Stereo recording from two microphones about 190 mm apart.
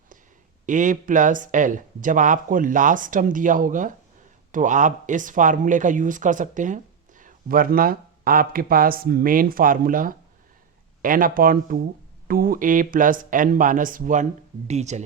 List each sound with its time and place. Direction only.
0.6 s speech: 40° right (ahead or behind)